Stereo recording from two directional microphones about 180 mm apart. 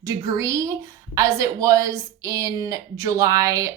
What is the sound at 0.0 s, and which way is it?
A woman's voice, 15° right (ahead or behind).